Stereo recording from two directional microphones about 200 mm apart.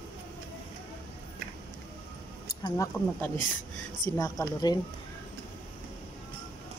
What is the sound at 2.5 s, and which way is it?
Speech, 15° left (ahead or behind).